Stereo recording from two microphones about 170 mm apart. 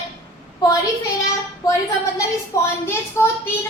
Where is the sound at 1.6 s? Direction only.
20° left (ahead or behind).